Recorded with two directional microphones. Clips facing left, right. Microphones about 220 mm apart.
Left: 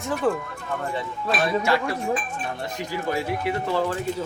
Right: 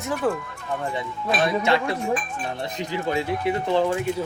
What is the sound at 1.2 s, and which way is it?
Speech, 20° right (ahead or behind).